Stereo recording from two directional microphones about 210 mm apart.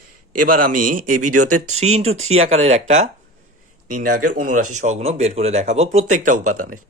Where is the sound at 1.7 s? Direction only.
30° right (ahead or behind).